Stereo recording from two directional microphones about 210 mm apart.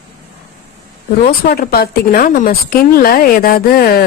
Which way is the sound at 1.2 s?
45° left (ahead or behind).